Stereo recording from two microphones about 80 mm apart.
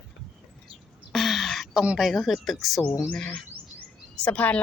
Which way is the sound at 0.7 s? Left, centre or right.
Centre.